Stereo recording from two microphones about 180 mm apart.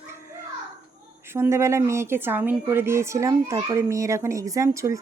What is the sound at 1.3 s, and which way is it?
A woman's voice, 15° right (ahead or behind).